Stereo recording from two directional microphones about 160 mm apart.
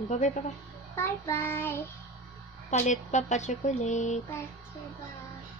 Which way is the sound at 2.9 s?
50° left (ahead or behind).